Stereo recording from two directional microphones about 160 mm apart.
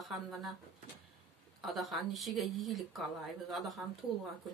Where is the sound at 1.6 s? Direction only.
Centre (ahead or behind).